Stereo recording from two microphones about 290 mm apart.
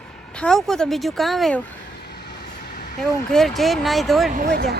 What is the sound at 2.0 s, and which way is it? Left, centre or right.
Vehicle, left.